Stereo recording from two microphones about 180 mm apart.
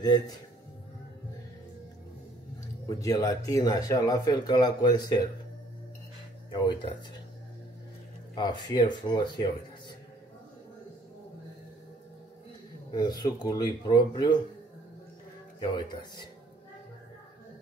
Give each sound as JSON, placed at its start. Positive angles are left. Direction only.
{"t": 2.9, "sound": "speech", "side_deg": 20}
{"t": 6.5, "sound": "speech", "side_deg": 25}
{"t": 8.4, "sound": "speech", "side_deg": 25}
{"t": 12.9, "sound": "speech", "side_deg": 20}
{"t": 15.6, "sound": "speech", "side_deg": 25}